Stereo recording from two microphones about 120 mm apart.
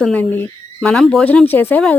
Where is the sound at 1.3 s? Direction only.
15° left (ahead or behind).